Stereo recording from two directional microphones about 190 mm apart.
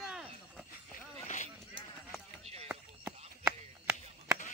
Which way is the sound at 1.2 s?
40° left (ahead or behind).